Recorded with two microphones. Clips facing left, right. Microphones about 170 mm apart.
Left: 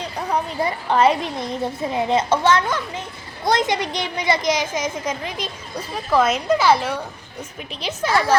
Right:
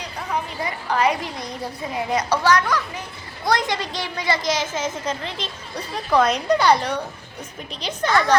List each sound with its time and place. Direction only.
0.3 s a woman's voice: 30° left (ahead or behind); by 8.1 s 5° left (ahead or behind)
8.1 s speech: 30° left (ahead or behind)